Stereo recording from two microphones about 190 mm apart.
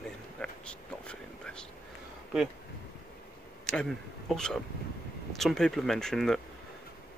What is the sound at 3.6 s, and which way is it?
Speech, 5° left (ahead or behind).